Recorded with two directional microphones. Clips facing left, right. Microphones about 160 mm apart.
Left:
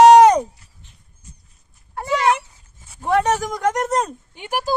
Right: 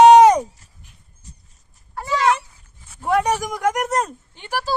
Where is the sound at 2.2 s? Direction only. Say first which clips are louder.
Even; 20° left (ahead or behind).